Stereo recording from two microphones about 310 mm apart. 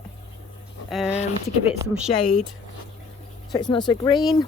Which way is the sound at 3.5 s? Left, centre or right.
Centre.